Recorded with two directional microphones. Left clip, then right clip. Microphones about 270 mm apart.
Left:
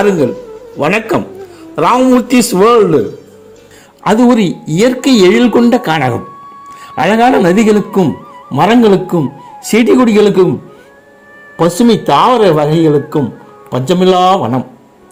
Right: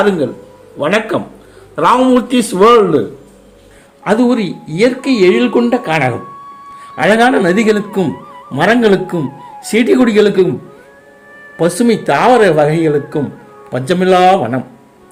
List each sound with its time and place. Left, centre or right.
0.8 s speech: left
4.0 s speech: left
11.5 s speech: centre